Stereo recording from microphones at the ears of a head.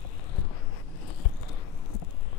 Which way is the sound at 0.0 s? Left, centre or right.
Left.